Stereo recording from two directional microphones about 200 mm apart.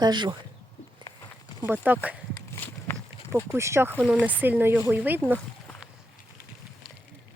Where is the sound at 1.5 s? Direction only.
10° right (ahead or behind).